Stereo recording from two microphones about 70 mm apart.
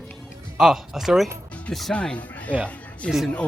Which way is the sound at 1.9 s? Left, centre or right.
Centre.